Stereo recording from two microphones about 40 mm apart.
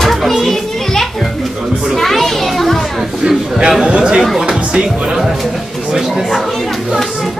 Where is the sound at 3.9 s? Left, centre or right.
Right.